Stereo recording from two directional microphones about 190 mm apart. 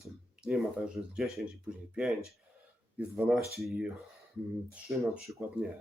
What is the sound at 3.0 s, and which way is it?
Speech, 5° right (ahead or behind).